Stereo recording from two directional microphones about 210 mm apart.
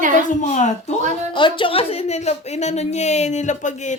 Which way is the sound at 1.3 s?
20° left (ahead or behind).